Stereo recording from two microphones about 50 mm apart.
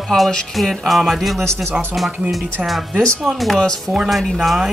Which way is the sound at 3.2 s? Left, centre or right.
Centre.